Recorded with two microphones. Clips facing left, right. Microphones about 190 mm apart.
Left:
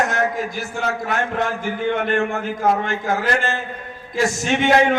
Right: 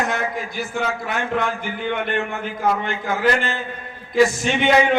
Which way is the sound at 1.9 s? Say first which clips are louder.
Left 3 dB; 45° left (ahead or behind).